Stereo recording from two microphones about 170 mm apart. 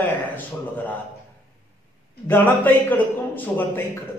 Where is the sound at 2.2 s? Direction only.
10° left (ahead or behind).